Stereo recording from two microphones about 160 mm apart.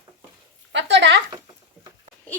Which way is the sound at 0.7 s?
90° right.